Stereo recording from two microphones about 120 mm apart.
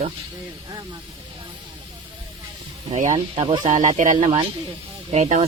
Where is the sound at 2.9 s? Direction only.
90° right.